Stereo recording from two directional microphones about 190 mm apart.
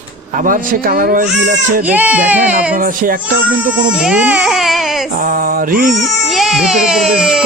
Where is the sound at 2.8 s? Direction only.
45° right (ahead or behind).